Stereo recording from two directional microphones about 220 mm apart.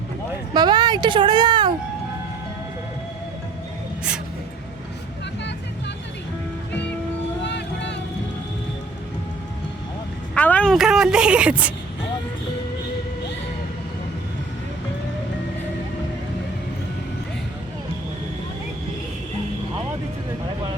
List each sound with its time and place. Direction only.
0.5 s speech: 20° right (ahead or behind)
7.4 s vehicle: 50° left (ahead or behind)
10.3 s a sound: 5° left (ahead or behind)